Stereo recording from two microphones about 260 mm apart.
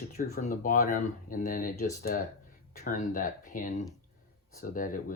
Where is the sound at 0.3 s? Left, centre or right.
Left.